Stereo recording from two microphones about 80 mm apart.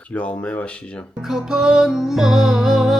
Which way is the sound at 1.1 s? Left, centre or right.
Centre.